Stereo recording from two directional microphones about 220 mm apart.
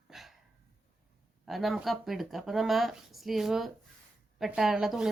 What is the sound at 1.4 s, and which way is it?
Speech, centre (ahead or behind).